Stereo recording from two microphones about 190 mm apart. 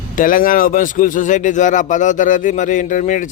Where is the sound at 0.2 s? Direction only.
45° left (ahead or behind).